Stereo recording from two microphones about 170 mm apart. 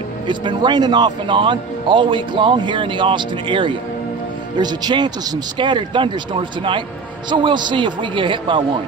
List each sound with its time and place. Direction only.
0.3 s speech: 25° right (ahead or behind)